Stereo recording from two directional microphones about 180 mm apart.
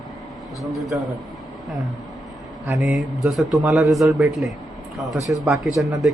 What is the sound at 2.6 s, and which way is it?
A man's voice, centre (ahead or behind).